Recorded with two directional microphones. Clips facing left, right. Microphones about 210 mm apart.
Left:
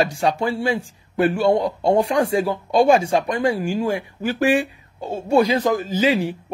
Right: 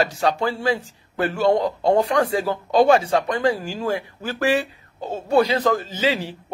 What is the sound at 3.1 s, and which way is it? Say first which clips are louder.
Speech: left 1 dB; 30° left (ahead or behind).